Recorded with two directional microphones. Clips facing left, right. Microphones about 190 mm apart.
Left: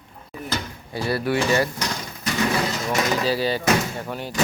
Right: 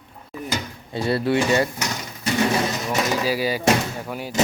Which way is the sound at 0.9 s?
25° right (ahead or behind).